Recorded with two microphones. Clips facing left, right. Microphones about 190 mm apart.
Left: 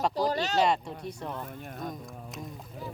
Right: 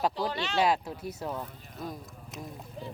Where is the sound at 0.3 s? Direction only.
40° left (ahead or behind).